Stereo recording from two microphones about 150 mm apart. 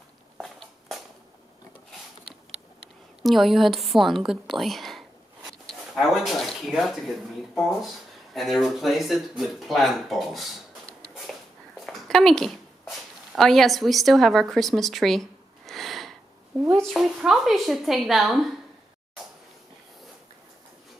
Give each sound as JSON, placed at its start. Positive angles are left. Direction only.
{"t": 0.4, "sound": "walk", "side_deg": 0}
{"t": 3.2, "sound": "a woman's voice", "side_deg": 0}
{"t": 8.4, "sound": "speech", "side_deg": 0}
{"t": 11.8, "sound": "a sound", "side_deg": 0}
{"t": 13.3, "sound": "a woman's voice", "side_deg": 0}